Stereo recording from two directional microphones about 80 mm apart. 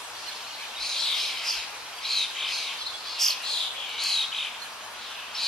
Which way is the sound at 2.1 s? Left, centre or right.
Centre.